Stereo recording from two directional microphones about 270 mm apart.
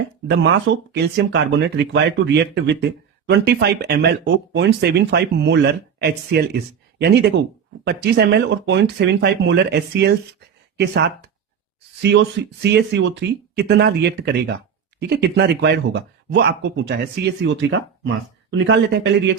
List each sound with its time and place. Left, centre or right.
0.3 s speech: right